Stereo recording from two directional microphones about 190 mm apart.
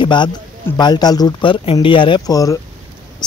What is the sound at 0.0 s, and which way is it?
Speech, 25° left (ahead or behind).